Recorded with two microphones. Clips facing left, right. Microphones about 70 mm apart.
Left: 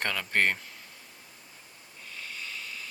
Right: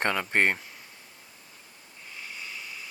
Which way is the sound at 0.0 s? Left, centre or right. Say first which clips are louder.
Right 3 dB; right.